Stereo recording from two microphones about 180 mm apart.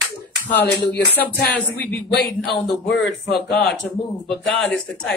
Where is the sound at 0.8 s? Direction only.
70° left (ahead or behind).